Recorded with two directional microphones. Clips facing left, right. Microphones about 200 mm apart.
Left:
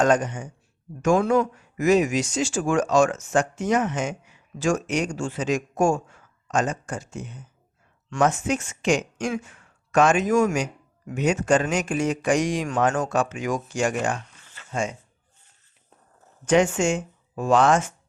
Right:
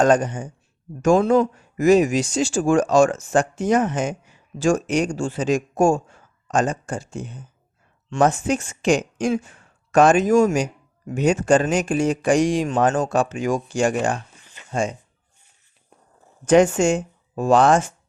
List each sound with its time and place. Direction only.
0.0 s speech: 35° right (ahead or behind)
14.4 s a sound: 15° right (ahead or behind)
14.7 s speech: 35° right (ahead or behind)
16.5 s speech: 35° right (ahead or behind)